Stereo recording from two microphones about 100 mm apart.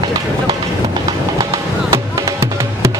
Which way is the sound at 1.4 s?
40° right (ahead or behind).